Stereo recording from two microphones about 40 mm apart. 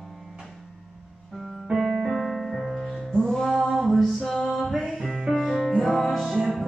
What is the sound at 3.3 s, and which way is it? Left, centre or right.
Music, centre.